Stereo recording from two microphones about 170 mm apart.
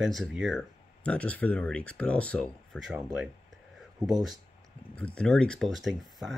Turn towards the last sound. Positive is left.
turn(degrees=0)  # may be behind; listen again after turning